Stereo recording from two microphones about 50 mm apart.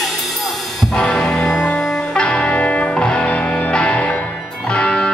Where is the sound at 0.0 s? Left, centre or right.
Centre.